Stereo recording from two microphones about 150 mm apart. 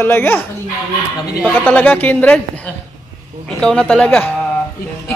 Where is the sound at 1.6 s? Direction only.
10° left (ahead or behind).